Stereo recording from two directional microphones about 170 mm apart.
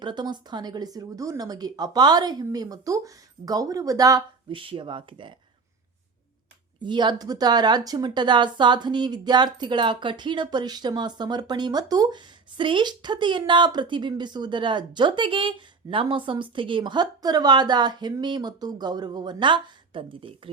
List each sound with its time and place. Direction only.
0.0 s speech: 25° right (ahead or behind)
6.8 s speech: 25° right (ahead or behind)